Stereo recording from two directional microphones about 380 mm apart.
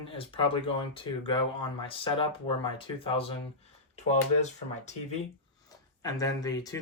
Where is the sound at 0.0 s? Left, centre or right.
Centre.